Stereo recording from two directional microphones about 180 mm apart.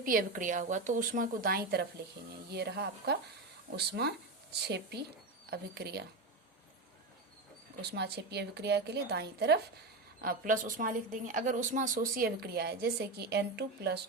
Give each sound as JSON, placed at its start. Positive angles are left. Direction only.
{"t": 0.0, "sound": "a woman's voice", "side_deg": -50}
{"t": 7.8, "sound": "a woman's voice", "side_deg": -65}
{"t": 10.2, "sound": "a woman's voice", "side_deg": -50}